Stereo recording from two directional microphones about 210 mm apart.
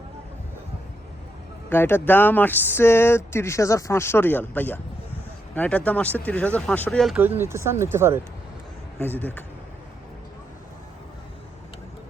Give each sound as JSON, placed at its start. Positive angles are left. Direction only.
{"t": 1.7, "sound": "speech", "side_deg": 10}
{"t": 7.2, "sound": "speech", "side_deg": -10}
{"t": 9.0, "sound": "speech", "side_deg": 10}